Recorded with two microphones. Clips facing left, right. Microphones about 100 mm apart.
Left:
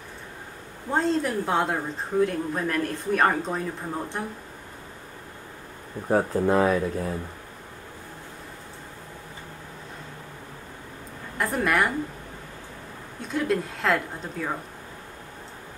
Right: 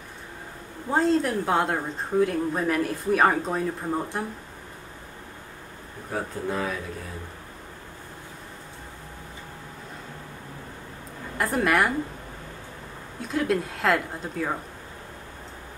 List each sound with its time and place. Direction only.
0.8 s speech: centre (ahead or behind)
6.0 s speech: 45° left (ahead or behind)
11.3 s speech: centre (ahead or behind)
13.2 s speech: centre (ahead or behind)